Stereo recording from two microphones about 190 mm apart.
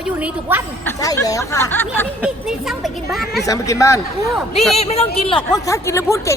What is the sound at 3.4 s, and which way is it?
Speech, 15° left (ahead or behind).